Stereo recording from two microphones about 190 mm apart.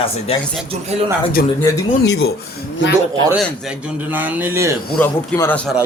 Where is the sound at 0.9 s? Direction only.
35° right (ahead or behind).